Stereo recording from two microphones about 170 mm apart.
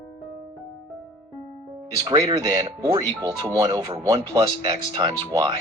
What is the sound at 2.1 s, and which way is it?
Speech, 30° right (ahead or behind).